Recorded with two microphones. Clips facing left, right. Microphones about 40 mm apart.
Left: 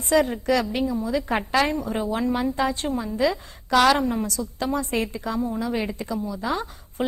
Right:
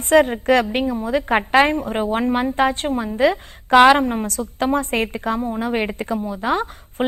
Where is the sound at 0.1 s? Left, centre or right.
Right.